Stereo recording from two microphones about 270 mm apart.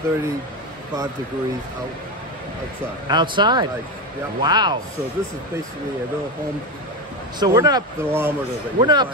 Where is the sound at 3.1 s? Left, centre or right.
Centre.